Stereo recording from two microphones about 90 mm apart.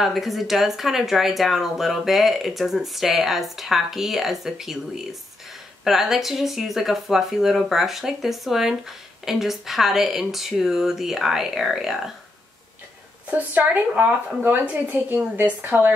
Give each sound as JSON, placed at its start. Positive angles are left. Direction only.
{"t": 0.0, "sound": "speech", "side_deg": 0}
{"t": 13.3, "sound": "speech", "side_deg": -20}